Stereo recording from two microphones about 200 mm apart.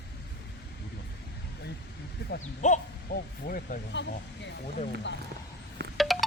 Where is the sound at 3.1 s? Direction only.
50° left (ahead or behind).